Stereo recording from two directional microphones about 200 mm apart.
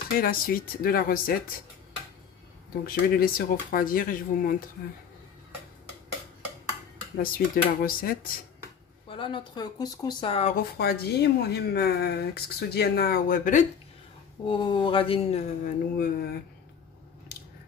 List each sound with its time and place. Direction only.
0.2 s speech: 45° left (ahead or behind)
2.8 s speech: 50° left (ahead or behind)
7.2 s speech: 45° left (ahead or behind)
9.1 s speech: 25° left (ahead or behind)
10.5 s speech: 50° left (ahead or behind)
14.4 s speech: 25° left (ahead or behind)
15.6 s speech: 50° left (ahead or behind)